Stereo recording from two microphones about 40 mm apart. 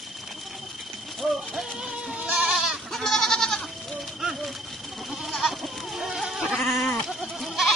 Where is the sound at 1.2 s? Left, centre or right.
Centre.